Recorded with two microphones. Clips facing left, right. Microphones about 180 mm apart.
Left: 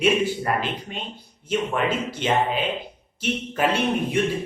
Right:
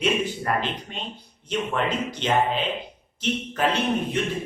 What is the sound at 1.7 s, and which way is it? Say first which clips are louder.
A man's voice: left 1 dB; 10° left (ahead or behind).